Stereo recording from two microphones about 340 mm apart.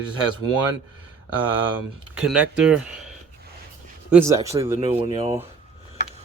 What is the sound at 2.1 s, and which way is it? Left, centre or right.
Speech, centre.